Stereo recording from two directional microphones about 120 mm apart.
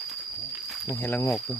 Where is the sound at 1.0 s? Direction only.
15° left (ahead or behind).